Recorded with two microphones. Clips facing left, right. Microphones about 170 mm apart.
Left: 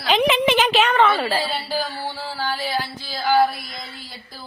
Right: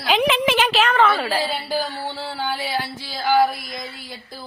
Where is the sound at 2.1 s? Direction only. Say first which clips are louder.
Even; 20° right (ahead or behind).